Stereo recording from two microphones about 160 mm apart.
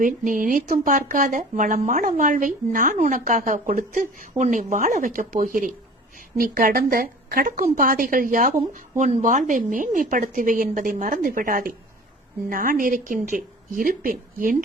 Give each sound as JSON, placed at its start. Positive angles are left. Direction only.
{"t": 0.0, "sound": "speech", "side_deg": -60}
{"t": 8.5, "sound": "speech", "side_deg": -45}